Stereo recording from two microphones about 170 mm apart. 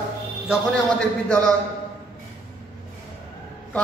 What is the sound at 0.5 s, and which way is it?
Speech, 5° left (ahead or behind).